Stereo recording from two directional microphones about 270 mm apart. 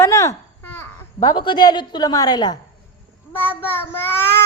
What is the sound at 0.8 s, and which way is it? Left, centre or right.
A woman's voice, centre.